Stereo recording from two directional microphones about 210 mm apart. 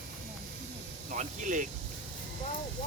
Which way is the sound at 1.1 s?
35° right (ahead or behind).